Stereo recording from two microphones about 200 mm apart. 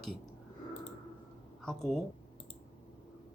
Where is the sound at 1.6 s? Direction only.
Centre (ahead or behind).